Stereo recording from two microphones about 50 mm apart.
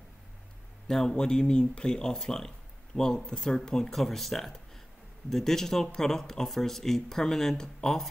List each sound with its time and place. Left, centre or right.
0.8 s a man's voice: centre
2.9 s speech: centre